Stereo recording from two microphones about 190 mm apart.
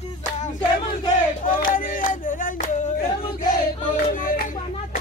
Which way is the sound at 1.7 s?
45° left (ahead or behind).